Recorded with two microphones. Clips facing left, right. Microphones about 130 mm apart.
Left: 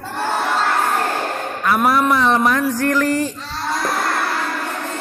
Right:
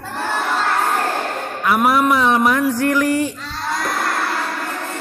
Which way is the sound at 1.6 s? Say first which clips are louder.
Right 1 dB; 10° right (ahead or behind).